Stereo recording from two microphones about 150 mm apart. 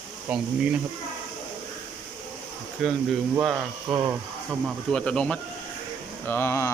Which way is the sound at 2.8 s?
Centre (ahead or behind).